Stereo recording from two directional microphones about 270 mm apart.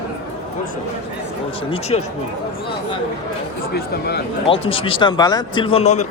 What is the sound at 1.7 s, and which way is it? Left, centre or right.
Speech, left.